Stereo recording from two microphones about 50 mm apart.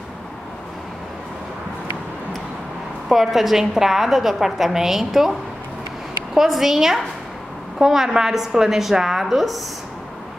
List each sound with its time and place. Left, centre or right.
3.1 s a woman's voice: centre
6.3 s a woman's voice: centre